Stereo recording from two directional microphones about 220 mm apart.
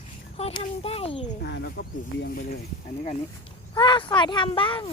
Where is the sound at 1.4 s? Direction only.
50° left (ahead or behind).